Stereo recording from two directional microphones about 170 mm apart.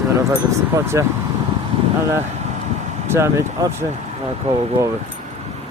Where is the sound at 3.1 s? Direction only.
15° right (ahead or behind).